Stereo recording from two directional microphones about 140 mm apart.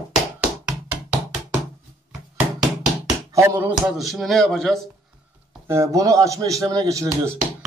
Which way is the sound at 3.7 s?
Centre (ahead or behind).